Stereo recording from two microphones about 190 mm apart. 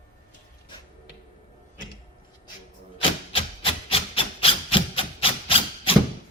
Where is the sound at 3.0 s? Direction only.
30° left (ahead or behind).